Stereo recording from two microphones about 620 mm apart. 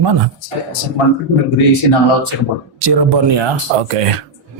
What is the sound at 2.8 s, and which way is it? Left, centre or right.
Speech, right.